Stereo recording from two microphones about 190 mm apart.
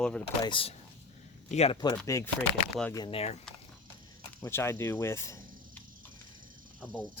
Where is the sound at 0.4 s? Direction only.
30° left (ahead or behind).